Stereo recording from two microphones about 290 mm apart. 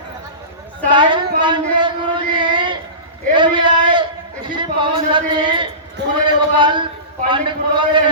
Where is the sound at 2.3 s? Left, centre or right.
Centre.